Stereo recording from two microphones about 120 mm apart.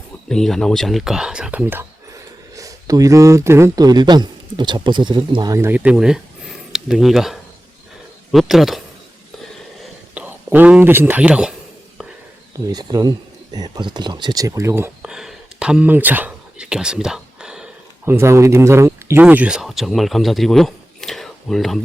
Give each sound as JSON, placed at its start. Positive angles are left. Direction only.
{"t": 0.3, "sound": "speech", "side_deg": 5}
{"t": 2.6, "sound": "speech", "side_deg": -30}
{"t": 3.8, "sound": "speech", "side_deg": -35}
{"t": 5.5, "sound": "speech", "side_deg": -15}
{"t": 10.2, "sound": "speech", "side_deg": -15}
{"t": 12.5, "sound": "speech", "side_deg": -30}
{"t": 15.0, "sound": "a sound", "side_deg": -5}
{"t": 18.0, "sound": "speech", "side_deg": -20}